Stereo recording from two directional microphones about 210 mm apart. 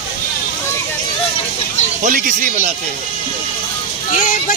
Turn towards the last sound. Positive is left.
turn(degrees=35)  # may be behind; listen again after turning